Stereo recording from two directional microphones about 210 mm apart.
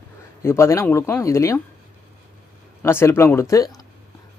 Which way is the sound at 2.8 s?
10° left (ahead or behind).